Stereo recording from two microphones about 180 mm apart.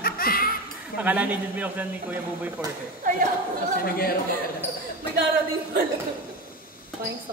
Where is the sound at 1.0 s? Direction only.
10° right (ahead or behind).